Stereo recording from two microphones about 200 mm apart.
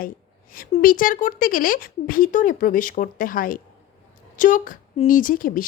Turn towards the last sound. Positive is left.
turn(degrees=45)  # may be behind; listen again after turning